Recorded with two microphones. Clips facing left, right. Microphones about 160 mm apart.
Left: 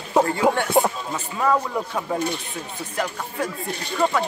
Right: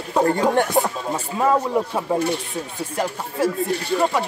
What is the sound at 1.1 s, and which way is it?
Speech, 25° right (ahead or behind).